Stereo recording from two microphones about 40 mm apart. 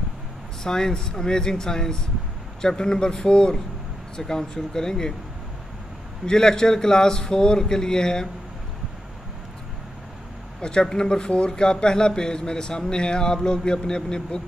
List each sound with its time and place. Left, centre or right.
0.7 s a man's voice: centre
6.2 s speech: centre
10.6 s a man's voice: left